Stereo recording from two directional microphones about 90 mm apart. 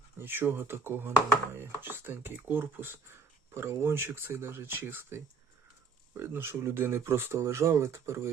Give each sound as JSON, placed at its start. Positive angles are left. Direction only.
{"t": 0.2, "sound": "speech", "side_deg": -20}